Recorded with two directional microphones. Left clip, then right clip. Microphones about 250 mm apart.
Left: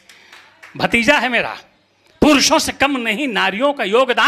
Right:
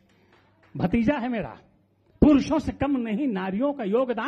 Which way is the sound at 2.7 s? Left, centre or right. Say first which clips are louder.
Left 10 dB; centre.